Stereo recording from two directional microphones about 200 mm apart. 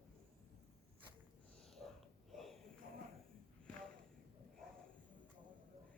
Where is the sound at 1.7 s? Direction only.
Centre (ahead or behind).